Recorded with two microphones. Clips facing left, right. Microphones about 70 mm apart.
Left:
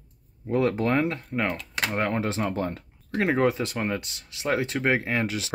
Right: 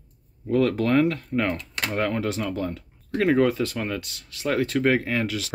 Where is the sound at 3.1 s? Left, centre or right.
Left.